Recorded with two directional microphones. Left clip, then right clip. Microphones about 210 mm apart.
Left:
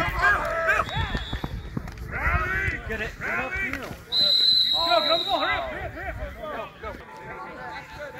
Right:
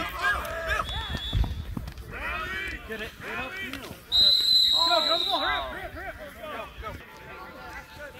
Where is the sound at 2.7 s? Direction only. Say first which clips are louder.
Left 6 dB; 35° left (ahead or behind).